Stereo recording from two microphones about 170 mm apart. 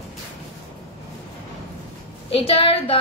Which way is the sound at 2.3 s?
35° left (ahead or behind).